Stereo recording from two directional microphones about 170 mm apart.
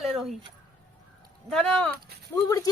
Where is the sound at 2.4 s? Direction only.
20° left (ahead or behind).